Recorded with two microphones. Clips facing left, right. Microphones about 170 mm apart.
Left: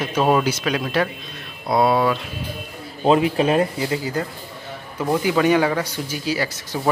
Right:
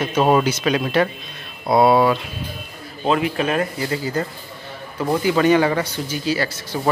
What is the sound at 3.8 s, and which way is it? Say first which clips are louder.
Speech: even; 10° left (ahead or behind).